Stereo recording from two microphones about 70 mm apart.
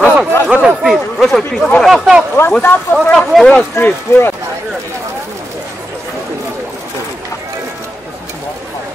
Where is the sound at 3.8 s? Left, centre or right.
Left.